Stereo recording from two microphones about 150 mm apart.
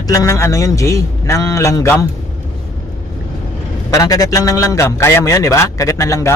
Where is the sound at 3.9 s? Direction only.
20° left (ahead or behind).